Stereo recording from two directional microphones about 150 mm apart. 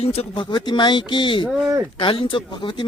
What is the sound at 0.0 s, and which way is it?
Speech, 40° left (ahead or behind).